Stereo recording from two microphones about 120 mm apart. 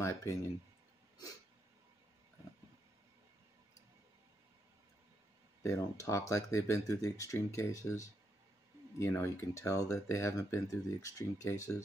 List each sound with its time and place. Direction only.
0.0 s speech: 25° left (ahead or behind)
5.6 s speech: 25° left (ahead or behind)